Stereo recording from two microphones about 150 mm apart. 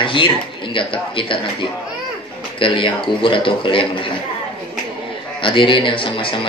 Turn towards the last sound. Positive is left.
turn(degrees=35)  # may be behind; listen again after turning